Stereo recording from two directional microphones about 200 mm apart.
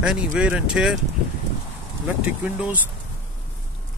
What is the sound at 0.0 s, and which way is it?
Speech, 5° right (ahead or behind).